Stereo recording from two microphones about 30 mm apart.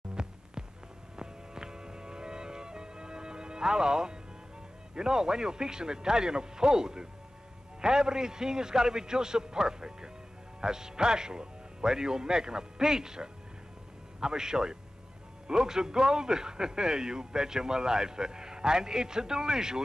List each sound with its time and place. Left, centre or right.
0.1 s music: right
4.9 s a man's voice: right